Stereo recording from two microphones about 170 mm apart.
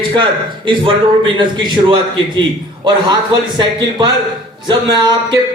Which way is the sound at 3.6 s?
25° right (ahead or behind).